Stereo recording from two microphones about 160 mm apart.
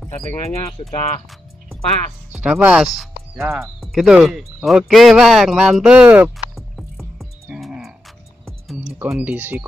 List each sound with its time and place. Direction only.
0.9 s speech: 40° left (ahead or behind)
2.3 s speech: 5° right (ahead or behind)
3.4 s speech: 15° right (ahead or behind)
3.8 s a sound: centre (ahead or behind)
9.1 s speech: 10° right (ahead or behind)